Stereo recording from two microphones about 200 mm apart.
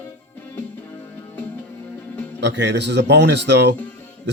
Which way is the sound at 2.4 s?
60° right (ahead or behind).